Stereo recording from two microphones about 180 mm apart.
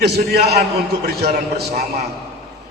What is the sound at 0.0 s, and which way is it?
Speech, 65° right (ahead or behind).